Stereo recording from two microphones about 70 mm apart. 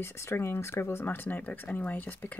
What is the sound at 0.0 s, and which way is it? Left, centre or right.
Speech, left.